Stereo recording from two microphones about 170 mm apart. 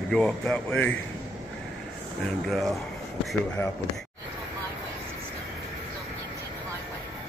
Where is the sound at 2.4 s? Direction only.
Centre (ahead or behind).